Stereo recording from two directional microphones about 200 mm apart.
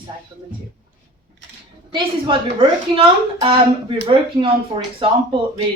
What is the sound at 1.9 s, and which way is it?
A woman's voice, 25° right (ahead or behind).